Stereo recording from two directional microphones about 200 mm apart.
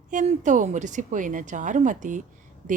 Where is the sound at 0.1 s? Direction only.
40° right (ahead or behind).